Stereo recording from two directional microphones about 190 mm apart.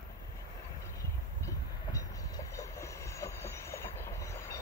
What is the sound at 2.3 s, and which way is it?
Train, 15° left (ahead or behind).